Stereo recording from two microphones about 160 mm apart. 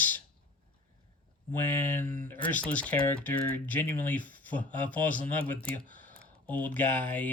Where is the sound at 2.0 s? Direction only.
55° right (ahead or behind).